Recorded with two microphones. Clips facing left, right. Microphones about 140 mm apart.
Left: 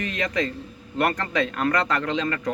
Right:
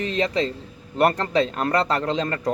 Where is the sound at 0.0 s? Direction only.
30° right (ahead or behind).